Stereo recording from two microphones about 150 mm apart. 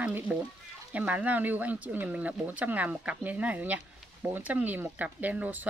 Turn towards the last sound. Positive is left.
turn(degrees=-10)  # may be behind; listen again after turning